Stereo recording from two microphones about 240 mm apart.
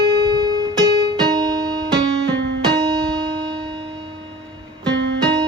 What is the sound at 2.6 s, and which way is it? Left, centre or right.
Music, centre.